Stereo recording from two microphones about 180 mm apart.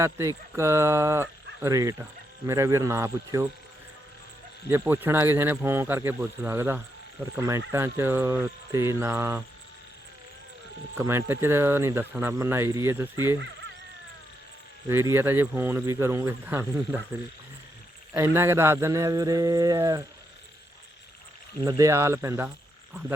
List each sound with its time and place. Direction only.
0.0 s speech: 15° right (ahead or behind)
4.7 s speech: 10° right (ahead or behind)
10.9 s speech: 15° right (ahead or behind)
14.8 s speech: 15° right (ahead or behind)
18.1 s speech: 15° right (ahead or behind)
21.6 s speech: 15° right (ahead or behind)